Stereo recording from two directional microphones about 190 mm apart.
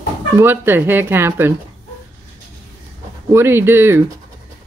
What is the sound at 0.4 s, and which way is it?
Speech, 10° right (ahead or behind).